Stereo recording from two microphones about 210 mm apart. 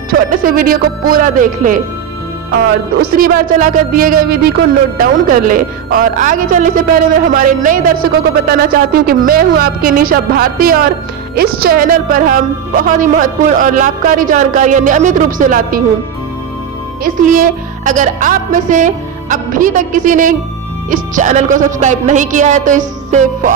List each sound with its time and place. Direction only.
0.1 s speech: 45° right (ahead or behind)
3.0 s a woman's voice: 45° right (ahead or behind)
17.0 s speech: 40° right (ahead or behind)